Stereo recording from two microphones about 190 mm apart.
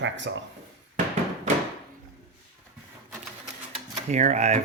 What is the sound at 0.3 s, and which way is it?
Speech, 70° right (ahead or behind).